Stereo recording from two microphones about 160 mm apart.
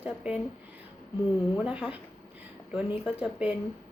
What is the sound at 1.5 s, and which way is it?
Speech, 5° right (ahead or behind).